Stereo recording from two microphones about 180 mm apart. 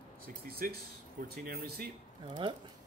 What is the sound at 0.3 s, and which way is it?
Speech, 55° right (ahead or behind).